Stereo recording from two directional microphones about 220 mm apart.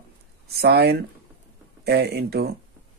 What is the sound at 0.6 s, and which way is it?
A man's voice, 45° right (ahead or behind).